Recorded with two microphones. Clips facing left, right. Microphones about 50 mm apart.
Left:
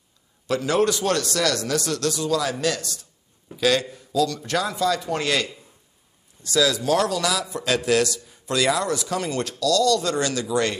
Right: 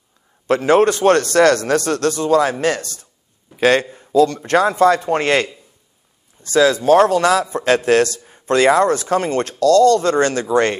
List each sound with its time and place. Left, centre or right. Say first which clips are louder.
0.5 s a man's voice: right 8 dB; right